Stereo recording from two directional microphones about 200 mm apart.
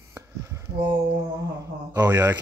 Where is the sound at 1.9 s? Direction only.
15° right (ahead or behind).